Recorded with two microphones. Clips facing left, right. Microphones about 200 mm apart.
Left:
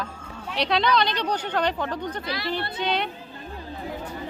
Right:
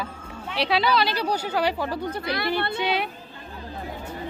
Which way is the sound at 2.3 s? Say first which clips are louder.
Right 5 dB; 60° right (ahead or behind).